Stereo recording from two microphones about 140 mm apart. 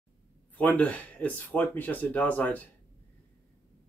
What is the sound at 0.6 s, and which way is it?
Speech, 10° left (ahead or behind).